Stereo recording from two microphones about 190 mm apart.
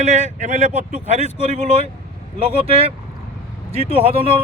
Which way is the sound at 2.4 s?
30° right (ahead or behind).